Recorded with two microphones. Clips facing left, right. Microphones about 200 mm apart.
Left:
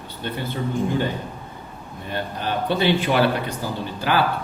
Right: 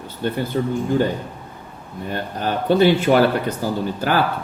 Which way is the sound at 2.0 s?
45° right (ahead or behind).